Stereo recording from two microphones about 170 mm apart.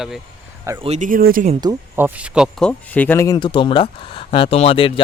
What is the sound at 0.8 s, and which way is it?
Speech, 45° right (ahead or behind).